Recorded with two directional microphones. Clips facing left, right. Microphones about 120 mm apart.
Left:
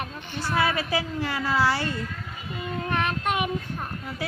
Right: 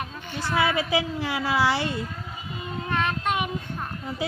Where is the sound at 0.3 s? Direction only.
15° right (ahead or behind).